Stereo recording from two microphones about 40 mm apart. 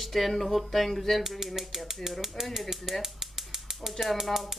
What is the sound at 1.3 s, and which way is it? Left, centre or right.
Speech, centre.